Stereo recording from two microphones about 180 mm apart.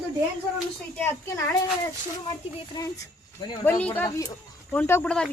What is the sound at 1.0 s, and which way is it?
Speech, 15° left (ahead or behind).